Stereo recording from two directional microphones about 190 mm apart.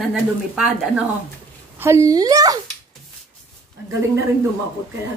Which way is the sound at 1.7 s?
15° right (ahead or behind).